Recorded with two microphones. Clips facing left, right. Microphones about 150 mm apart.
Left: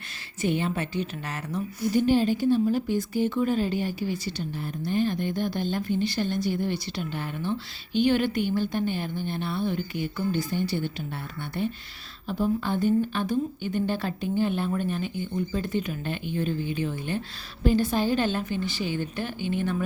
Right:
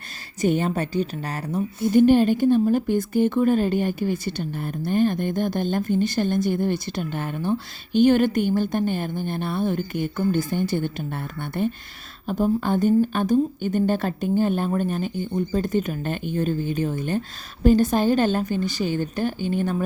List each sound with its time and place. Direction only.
0.4 s a woman's voice: 45° right (ahead or behind)
1.9 s speech: 55° right (ahead or behind)